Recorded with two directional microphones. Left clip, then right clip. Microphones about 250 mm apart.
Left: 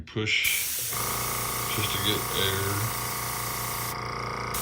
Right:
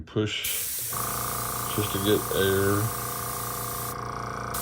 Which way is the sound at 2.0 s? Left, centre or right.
Centre.